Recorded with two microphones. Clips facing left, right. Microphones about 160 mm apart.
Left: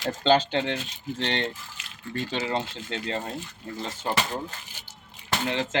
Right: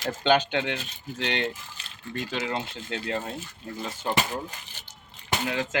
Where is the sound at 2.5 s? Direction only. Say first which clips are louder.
Left 2 dB; 30° left (ahead or behind).